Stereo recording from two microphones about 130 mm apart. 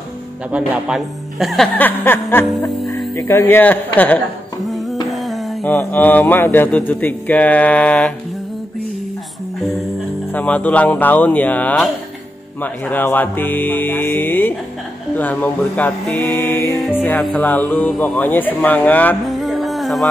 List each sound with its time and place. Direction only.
0.5 s speech: 10° right (ahead or behind)
1.8 s speech: 15° left (ahead or behind)
5.1 s a sound: centre (ahead or behind)
5.6 s speech: 15° left (ahead or behind)
10.3 s speech: 10° left (ahead or behind)
19.4 s music: centre (ahead or behind)